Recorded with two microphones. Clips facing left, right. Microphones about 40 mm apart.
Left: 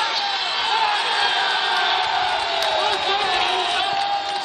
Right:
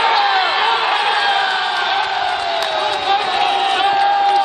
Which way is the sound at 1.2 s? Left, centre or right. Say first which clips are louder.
Right 5 dB; centre.